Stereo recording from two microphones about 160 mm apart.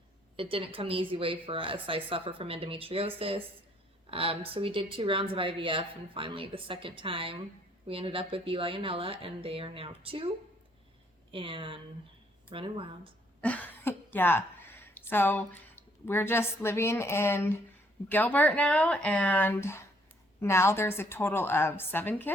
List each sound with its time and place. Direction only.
0.3 s speech: 35° right (ahead or behind)
13.4 s a woman's voice: 10° left (ahead or behind)